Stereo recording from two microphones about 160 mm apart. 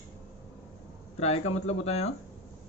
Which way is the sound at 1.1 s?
40° left (ahead or behind).